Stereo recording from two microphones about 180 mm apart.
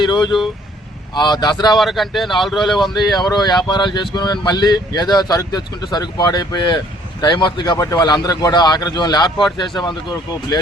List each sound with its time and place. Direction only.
0.0 s speech: 25° left (ahead or behind)
1.7 s speech: centre (ahead or behind)
3.0 s speech: 20° left (ahead or behind)